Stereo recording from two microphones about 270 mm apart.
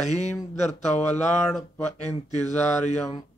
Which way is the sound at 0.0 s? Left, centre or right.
Left.